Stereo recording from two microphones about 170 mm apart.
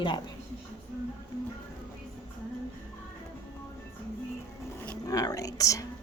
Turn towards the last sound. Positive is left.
turn(degrees=20)  # may be behind; listen again after turning